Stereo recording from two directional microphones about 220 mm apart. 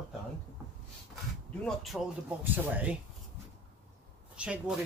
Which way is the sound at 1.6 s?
Centre (ahead or behind).